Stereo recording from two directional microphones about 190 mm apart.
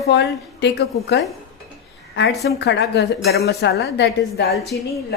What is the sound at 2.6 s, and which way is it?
Speech, 65° left (ahead or behind).